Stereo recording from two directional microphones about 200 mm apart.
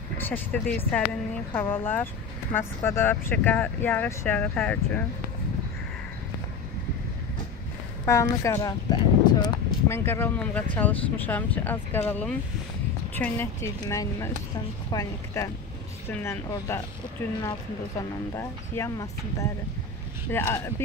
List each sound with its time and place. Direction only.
0.2 s speech: 10° left (ahead or behind)
8.0 s speech: 15° left (ahead or behind)
18.3 s speech: 15° left (ahead or behind)
20.2 s speech: 10° left (ahead or behind)